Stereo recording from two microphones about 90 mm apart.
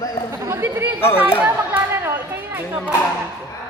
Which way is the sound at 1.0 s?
25° left (ahead or behind).